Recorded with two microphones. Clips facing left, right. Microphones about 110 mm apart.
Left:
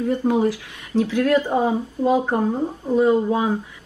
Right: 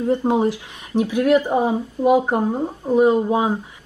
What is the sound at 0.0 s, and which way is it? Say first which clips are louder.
Speech: right 1 dB; 25° right (ahead or behind).